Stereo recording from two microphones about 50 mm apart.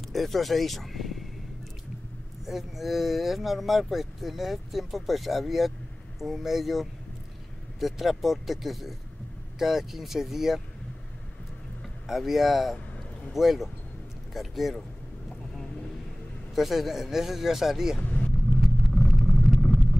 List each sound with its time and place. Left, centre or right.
0.1 s speech: centre
2.4 s speech: centre
12.1 s speech: centre
16.5 s speech: centre
18.0 s vehicle: left
18.6 s vehicle: centre